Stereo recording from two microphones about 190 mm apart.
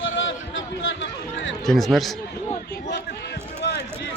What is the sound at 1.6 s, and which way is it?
Speech, centre (ahead or behind).